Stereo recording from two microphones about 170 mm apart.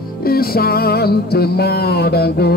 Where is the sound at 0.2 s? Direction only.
60° left (ahead or behind).